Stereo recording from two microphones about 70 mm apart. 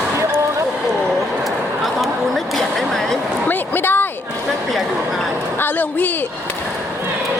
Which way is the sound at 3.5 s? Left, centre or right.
Left.